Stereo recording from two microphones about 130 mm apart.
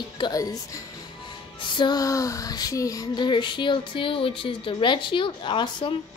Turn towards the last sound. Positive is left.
turn(degrees=35)  # may be behind; listen again after turning